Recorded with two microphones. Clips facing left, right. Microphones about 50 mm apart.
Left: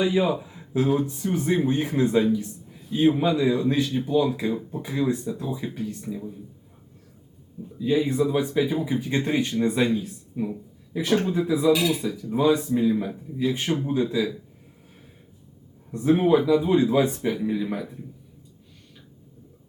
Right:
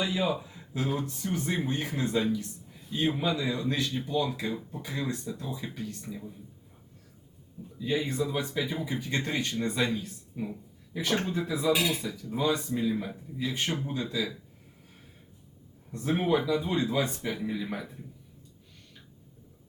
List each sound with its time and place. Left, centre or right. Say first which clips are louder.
0.0 s speech: left 7 dB; centre
2.6 s speech: left 9 dB; centre
7.9 s speech: left 7 dB; centre
15.9 s speech: left 8 dB; centre
17.3 s speech: left 7 dB; centre